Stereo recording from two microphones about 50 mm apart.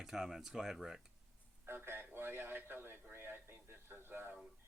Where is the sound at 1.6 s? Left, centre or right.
Right.